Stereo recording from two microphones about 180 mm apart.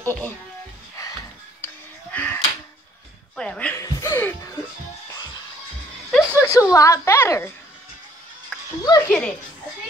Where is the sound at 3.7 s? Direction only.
15° left (ahead or behind).